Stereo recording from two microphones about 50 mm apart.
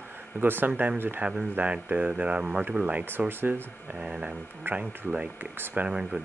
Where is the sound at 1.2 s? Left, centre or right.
Right.